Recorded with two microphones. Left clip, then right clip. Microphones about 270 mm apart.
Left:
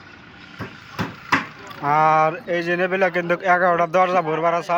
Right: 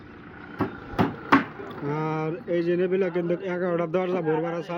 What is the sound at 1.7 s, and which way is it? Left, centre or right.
Speech, centre.